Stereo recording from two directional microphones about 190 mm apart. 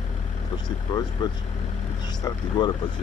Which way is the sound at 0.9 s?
25° left (ahead or behind).